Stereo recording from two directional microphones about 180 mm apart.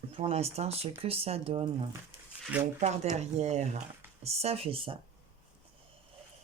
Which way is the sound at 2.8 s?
40° right (ahead or behind).